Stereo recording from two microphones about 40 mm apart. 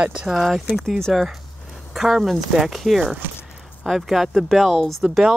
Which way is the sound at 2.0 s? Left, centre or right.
Centre.